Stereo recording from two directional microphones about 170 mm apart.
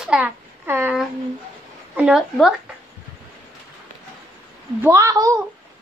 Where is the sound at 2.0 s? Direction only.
5° right (ahead or behind).